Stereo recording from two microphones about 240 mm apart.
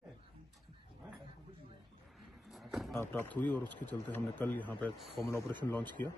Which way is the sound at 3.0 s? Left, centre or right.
Centre.